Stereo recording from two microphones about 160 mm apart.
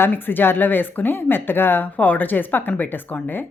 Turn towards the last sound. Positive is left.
turn(degrees=10)  # may be behind; listen again after turning